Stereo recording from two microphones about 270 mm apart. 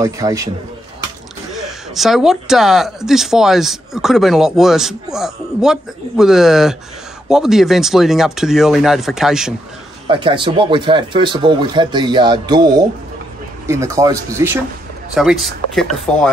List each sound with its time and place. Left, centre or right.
0.0 s speech: centre
1.5 s speech: centre
10.0 s speech: centre